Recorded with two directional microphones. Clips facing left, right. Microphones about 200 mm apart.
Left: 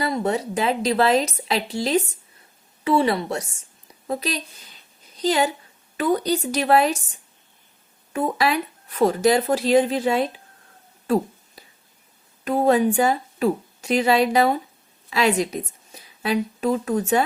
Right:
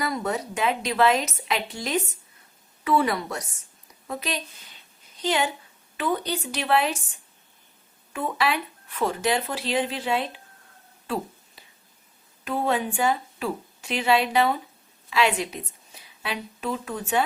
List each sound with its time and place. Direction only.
0.0 s a woman's voice: 30° left (ahead or behind)
8.1 s speech: 40° left (ahead or behind)
11.0 s a sound: 45° left (ahead or behind)
12.5 s speech: 40° left (ahead or behind)